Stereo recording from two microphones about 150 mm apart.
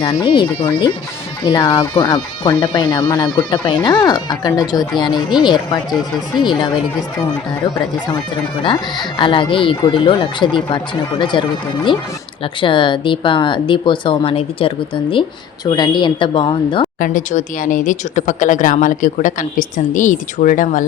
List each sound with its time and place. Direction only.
0.0 s speech: 30° left (ahead or behind)
9.1 s speech: 35° left (ahead or behind)
17.0 s speech: 60° left (ahead or behind)